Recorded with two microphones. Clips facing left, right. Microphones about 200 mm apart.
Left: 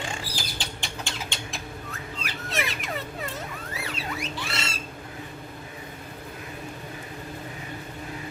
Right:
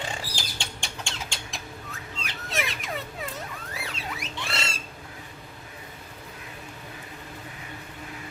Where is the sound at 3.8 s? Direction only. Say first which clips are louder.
Left 5 dB; centre (ahead or behind).